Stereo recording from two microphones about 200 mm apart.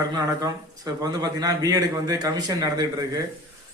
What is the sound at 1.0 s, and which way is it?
Speech, 20° right (ahead or behind).